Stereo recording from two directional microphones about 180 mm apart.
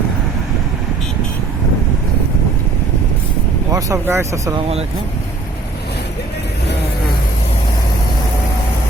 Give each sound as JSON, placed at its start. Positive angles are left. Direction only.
{"t": 3.7, "sound": "speech", "side_deg": -20}